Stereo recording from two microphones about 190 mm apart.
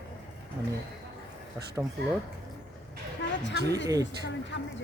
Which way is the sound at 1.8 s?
10° right (ahead or behind).